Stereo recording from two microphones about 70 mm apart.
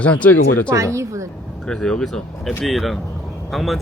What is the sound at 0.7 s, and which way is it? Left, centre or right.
Speech, right.